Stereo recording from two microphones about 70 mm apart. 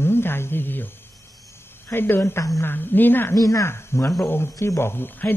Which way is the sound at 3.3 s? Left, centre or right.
Left.